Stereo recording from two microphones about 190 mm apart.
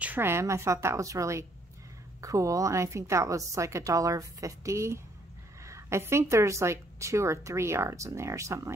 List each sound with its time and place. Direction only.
0.0 s a woman's voice: 10° right (ahead or behind)